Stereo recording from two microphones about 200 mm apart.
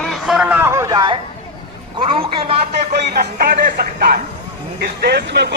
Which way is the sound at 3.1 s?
45° right (ahead or behind).